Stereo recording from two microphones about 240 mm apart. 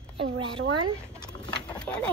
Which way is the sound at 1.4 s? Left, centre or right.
Centre.